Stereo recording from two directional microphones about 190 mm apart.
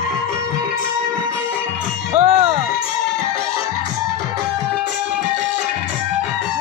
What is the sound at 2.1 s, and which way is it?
Music, 35° right (ahead or behind).